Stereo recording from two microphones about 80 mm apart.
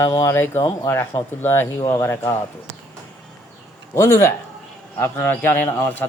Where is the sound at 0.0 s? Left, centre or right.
Left.